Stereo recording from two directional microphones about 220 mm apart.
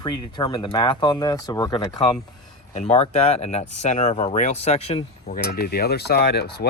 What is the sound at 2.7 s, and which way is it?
Speech, 30° left (ahead or behind).